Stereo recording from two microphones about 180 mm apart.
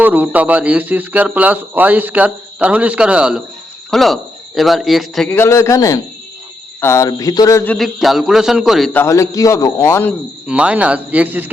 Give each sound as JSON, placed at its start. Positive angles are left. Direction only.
{"t": 0.0, "sound": "speech", "side_deg": -10}
{"t": 5.4, "sound": "a man's voice", "side_deg": 15}
{"t": 7.9, "sound": "speech", "side_deg": 0}
{"t": 8.9, "sound": "a man's voice", "side_deg": 15}
{"t": 10.4, "sound": "speech", "side_deg": -5}